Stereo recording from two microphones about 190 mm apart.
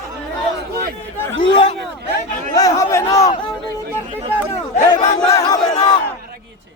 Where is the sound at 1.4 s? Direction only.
25° left (ahead or behind).